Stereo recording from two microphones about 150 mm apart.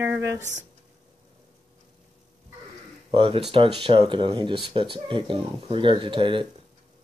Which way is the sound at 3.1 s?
35° right (ahead or behind).